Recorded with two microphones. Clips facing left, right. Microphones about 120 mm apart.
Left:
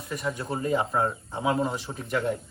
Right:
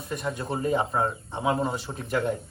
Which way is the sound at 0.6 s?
Centre (ahead or behind).